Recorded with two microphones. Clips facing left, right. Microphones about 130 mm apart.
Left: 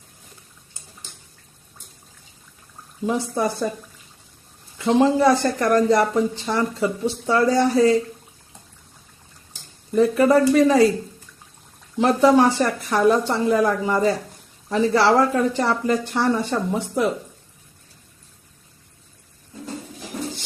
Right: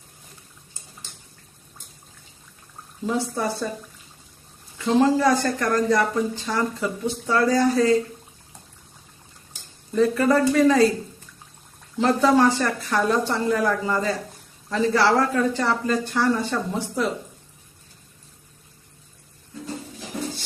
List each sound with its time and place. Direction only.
3.1 s speech: 15° left (ahead or behind)
4.8 s speech: 20° left (ahead or behind)
9.9 s speech: 20° left (ahead or behind)
11.9 s speech: 20° left (ahead or behind)